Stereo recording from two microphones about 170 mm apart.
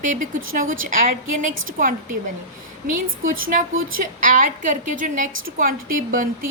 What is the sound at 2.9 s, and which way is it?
A woman's voice, 50° right (ahead or behind).